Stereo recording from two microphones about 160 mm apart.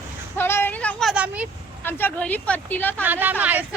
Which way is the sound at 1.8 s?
15° left (ahead or behind).